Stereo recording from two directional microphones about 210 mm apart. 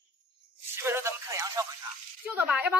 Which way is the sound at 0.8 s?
10° right (ahead or behind).